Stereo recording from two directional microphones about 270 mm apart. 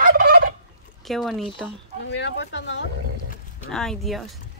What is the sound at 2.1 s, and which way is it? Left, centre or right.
Speech, left.